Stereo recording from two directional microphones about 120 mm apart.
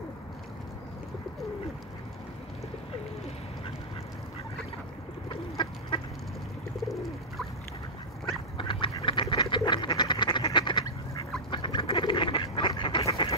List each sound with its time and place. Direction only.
5.3 s bird: 45° left (ahead or behind)
6.8 s bird: centre (ahead or behind)
8.5 s duck: 45° left (ahead or behind)
13.0 s duck: 55° left (ahead or behind)